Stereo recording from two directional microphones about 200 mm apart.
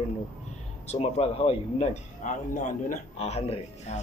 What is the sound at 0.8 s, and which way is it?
Speech, 35° left (ahead or behind).